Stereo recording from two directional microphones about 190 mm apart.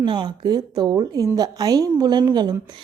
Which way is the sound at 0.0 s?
25° right (ahead or behind).